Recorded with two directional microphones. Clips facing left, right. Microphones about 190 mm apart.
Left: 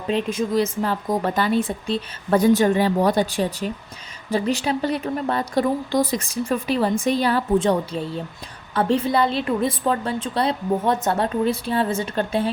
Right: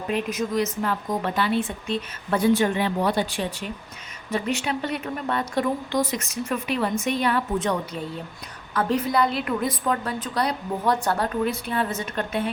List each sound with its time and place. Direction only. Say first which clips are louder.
0.1 s a woman's voice: left 4 dB; 30° left (ahead or behind)